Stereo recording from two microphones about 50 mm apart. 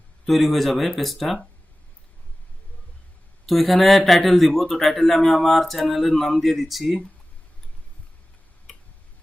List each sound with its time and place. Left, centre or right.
0.3 s a man's voice: centre
3.4 s a man's voice: centre